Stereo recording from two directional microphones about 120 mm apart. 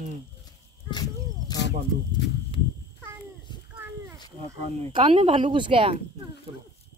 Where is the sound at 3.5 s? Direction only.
40° left (ahead or behind).